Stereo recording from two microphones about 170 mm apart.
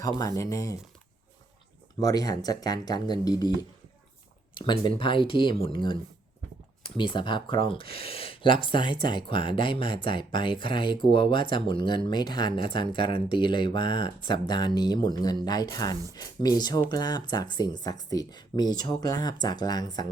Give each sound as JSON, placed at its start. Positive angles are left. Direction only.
{"t": 0.0, "sound": "speech", "side_deg": 20}
{"t": 2.0, "sound": "speech", "side_deg": 20}
{"t": 4.5, "sound": "speech", "side_deg": 25}